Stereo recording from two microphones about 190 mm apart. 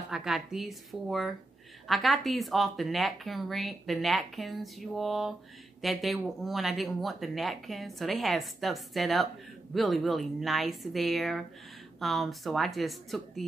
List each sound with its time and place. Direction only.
0.1 s speech: centre (ahead or behind)